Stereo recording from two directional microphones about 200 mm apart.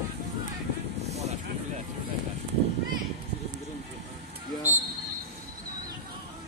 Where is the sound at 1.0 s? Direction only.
35° right (ahead or behind).